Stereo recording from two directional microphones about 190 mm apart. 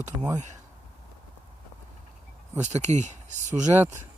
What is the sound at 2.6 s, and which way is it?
Speech, 35° right (ahead or behind).